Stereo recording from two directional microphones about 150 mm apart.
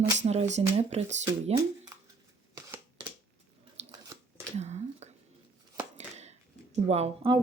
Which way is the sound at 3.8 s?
45° right (ahead or behind).